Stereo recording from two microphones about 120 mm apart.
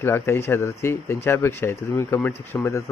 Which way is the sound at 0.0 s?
20° left (ahead or behind).